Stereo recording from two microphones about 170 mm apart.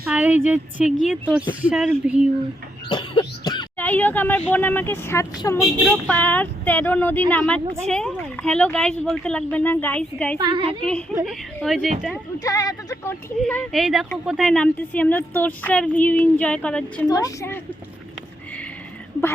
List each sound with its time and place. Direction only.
0.0 s speech: 10° right (ahead or behind)
2.9 s throat clearing: 25° left (ahead or behind)
3.8 s speech: 10° left (ahead or behind)
10.3 s a woman's voice: 30° right (ahead or behind)
10.8 s a woman's voice: 5° left (ahead or behind)
12.4 s speech: 20° left (ahead or behind)
13.4 s a woman's voice: 5° left (ahead or behind)
17.1 s speech: 20° left (ahead or behind)